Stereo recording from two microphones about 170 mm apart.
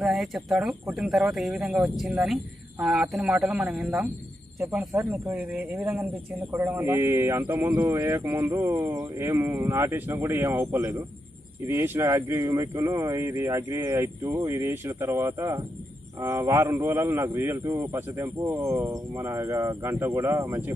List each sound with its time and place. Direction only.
0.0 s speech: centre (ahead or behind)
4.6 s speech: 15° right (ahead or behind)